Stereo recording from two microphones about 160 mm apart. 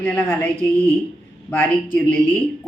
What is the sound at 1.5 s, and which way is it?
Speech, 10° left (ahead or behind).